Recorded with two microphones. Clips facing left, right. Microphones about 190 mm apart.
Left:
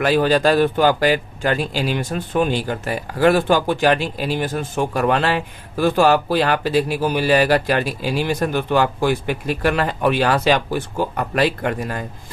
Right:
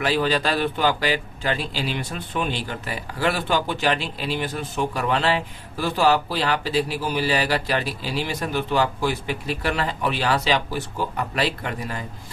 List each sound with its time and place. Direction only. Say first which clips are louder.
0.0 s speech: left 6 dB; 50° left (ahead or behind)